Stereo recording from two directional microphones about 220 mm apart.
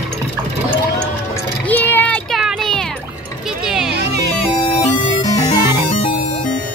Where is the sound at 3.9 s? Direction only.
50° right (ahead or behind).